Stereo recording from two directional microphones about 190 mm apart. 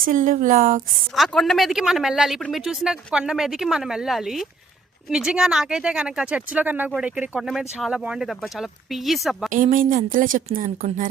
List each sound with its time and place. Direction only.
0.0 s speech: 45° right (ahead or behind)
1.1 s speech: centre (ahead or behind)
9.5 s speech: 45° right (ahead or behind)